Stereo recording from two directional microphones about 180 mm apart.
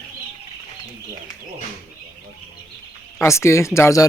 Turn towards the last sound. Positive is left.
turn(degrees=15)  # may be behind; listen again after turning